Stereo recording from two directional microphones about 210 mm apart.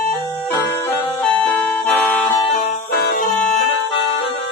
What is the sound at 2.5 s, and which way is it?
Music, 45° left (ahead or behind).